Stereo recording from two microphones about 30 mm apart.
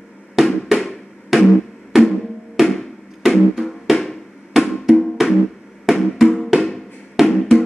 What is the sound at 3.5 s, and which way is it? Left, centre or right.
Music, centre.